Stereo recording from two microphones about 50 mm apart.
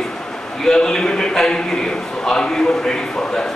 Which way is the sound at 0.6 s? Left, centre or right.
Centre.